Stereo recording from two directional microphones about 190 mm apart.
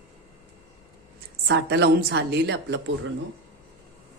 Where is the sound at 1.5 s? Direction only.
60° right (ahead or behind).